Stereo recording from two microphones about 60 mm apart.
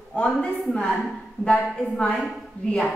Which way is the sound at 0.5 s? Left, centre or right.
Centre.